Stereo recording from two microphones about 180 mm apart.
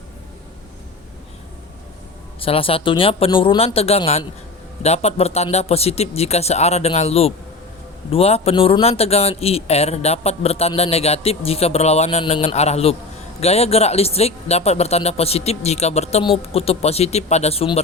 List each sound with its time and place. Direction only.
2.4 s speech: 30° left (ahead or behind)